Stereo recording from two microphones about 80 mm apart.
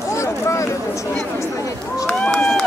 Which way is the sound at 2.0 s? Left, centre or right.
Centre.